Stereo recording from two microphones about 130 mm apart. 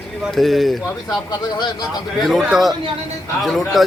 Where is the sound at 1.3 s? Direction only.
30° left (ahead or behind).